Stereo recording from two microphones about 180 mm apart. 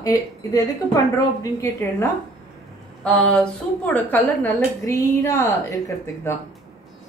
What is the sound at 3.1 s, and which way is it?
A woman's voice, 5° left (ahead or behind).